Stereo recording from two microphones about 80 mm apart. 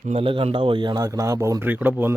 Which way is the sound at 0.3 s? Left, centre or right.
Right.